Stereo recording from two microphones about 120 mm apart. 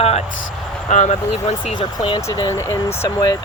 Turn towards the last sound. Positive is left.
turn(degrees=25)  # may be behind; listen again after turning